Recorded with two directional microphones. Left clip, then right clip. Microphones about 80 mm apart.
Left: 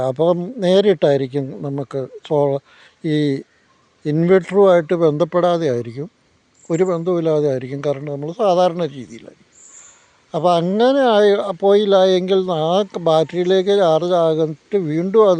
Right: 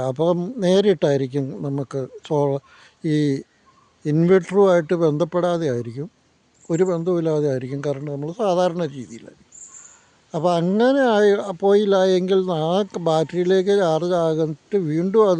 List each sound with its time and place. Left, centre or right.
0.0 s speech: right
5.3 s speech: centre
6.7 s speech: right
10.3 s speech: right